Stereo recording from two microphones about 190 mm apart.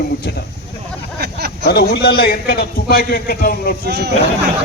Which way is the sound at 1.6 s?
60° left (ahead or behind).